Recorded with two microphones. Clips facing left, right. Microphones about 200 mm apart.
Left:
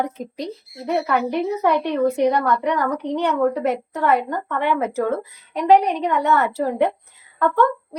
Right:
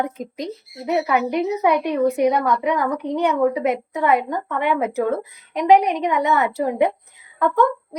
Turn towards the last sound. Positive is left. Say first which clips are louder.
# even
turn(degrees=-10)  # may be behind; listen again after turning